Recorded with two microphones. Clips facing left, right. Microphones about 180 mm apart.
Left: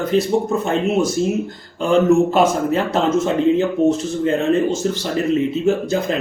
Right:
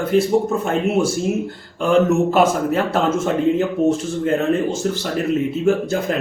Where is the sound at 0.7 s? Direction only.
10° right (ahead or behind).